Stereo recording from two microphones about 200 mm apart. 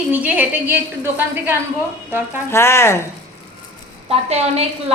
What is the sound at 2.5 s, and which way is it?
Speech, 15° left (ahead or behind).